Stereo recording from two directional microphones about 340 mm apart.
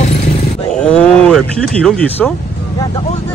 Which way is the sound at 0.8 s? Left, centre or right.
Centre.